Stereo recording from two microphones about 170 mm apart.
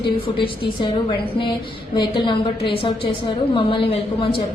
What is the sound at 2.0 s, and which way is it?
A woman's voice, 25° left (ahead or behind).